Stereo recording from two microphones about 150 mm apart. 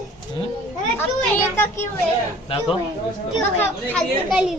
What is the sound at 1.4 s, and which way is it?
Speech, 15° left (ahead or behind).